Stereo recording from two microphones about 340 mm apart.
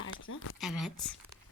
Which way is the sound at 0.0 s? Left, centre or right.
Left.